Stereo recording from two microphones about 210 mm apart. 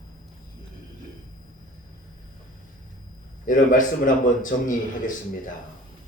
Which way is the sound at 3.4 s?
40° left (ahead or behind).